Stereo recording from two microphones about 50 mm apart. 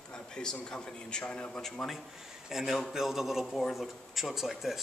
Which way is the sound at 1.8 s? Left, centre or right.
Centre.